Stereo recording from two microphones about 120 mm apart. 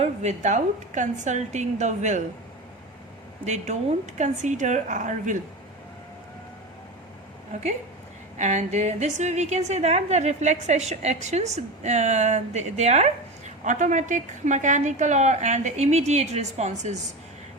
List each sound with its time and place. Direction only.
0.0 s a woman's voice: 70° right (ahead or behind)
3.4 s a woman's voice: 75° right (ahead or behind)
4.2 s a woman's voice: 90° right
8.4 s a woman's voice: 90° right; by 13.1 s 70° right (ahead or behind)
13.7 s a woman's voice: 90° right; by 17.0 s 70° right (ahead or behind)